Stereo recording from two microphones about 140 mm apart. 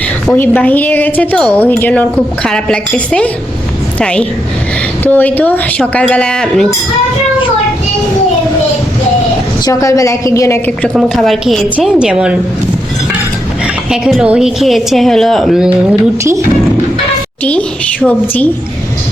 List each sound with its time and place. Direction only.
0.3 s a woman's voice: 15° left (ahead or behind)
9.6 s a woman's voice: 25° left (ahead or behind)
10.7 s a woman's voice: 5° left (ahead or behind)
13.9 s a woman's voice: 5° right (ahead or behind)
18.0 s a woman's voice: 10° left (ahead or behind)